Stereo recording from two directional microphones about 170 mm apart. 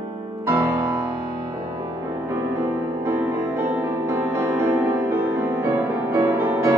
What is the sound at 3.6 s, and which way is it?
Music, 15° right (ahead or behind).